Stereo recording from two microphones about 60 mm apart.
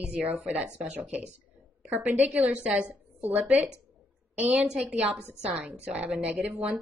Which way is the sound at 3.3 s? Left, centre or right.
Right.